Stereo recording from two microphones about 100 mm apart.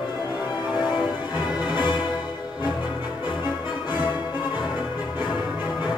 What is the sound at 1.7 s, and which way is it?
Music, 50° left (ahead or behind).